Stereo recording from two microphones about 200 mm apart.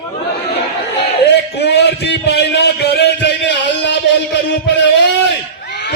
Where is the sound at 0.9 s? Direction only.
55° left (ahead or behind).